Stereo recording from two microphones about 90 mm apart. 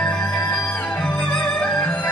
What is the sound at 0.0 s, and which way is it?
Music, 10° left (ahead or behind).